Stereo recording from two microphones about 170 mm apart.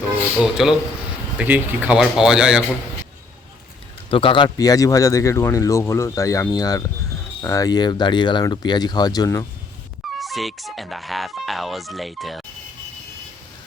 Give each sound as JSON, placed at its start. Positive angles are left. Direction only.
{"t": 0.3, "sound": "speech", "side_deg": 0}
{"t": 4.1, "sound": "speech", "side_deg": 30}
{"t": 10.2, "sound": "speech", "side_deg": 0}